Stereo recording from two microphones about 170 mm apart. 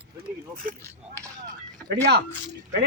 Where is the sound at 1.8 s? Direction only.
75° right (ahead or behind).